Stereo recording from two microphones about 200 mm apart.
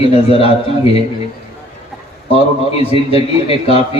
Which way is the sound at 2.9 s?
30° left (ahead or behind).